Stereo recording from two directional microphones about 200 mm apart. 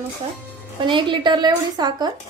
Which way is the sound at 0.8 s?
25° right (ahead or behind).